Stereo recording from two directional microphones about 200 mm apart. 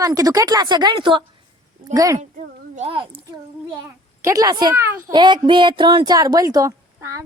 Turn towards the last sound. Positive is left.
turn(degrees=-15)  # may be behind; listen again after turning